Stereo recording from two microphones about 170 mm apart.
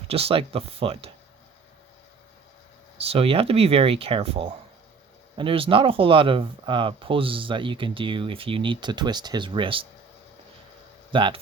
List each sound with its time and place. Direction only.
0.1 s speech: 35° right (ahead or behind)
3.1 s speech: 35° right (ahead or behind)
11.1 s speech: 30° right (ahead or behind)